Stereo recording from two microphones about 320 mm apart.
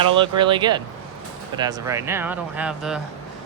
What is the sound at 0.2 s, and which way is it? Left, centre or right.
Speech, centre.